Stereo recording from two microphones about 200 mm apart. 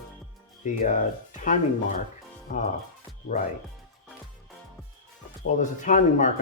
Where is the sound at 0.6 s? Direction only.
40° left (ahead or behind).